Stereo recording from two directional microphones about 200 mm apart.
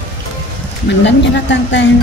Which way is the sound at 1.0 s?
65° left (ahead or behind).